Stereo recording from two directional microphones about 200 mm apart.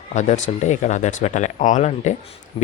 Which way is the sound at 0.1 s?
35° left (ahead or behind).